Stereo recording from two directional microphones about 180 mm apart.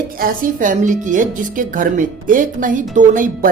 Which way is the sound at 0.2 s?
50° right (ahead or behind).